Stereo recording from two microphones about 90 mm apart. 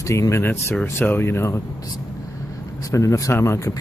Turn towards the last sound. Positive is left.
turn(degrees=35)  # may be behind; listen again after turning